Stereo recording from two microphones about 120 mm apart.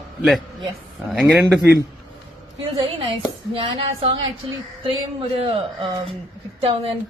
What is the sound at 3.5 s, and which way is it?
Speech, 50° right (ahead or behind).